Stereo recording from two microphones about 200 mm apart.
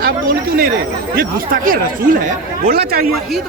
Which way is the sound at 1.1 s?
45° right (ahead or behind).